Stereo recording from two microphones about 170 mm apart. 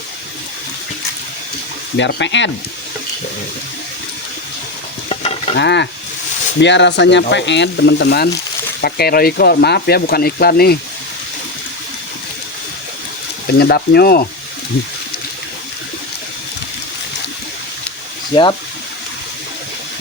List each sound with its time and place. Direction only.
2.0 s speech: 90° left
5.0 s stir: 35° left (ahead or behind)
5.5 s speech: 90° left; by 8.3 s 75° left (ahead or behind)
8.8 s speech: 65° left (ahead or behind)
13.6 s speech: 70° left (ahead or behind)